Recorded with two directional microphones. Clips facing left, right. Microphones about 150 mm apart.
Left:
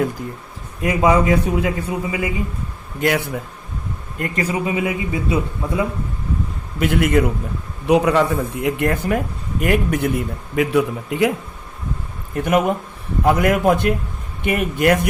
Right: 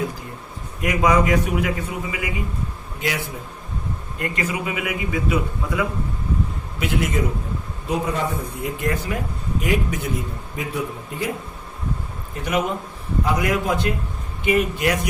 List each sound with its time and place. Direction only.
0.8 s a man's voice: 30° left (ahead or behind)
3.0 s speech: 60° left (ahead or behind)
4.2 s a man's voice: 35° left (ahead or behind)
6.7 s speech: 55° left (ahead or behind)
7.9 s speech: 75° left (ahead or behind); by 10.1 s 60° left (ahead or behind)
10.5 s a man's voice: 80° left
12.4 s speech: 50° left (ahead or behind)